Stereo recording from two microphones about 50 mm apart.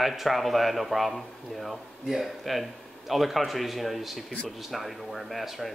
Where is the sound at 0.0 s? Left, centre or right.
Centre.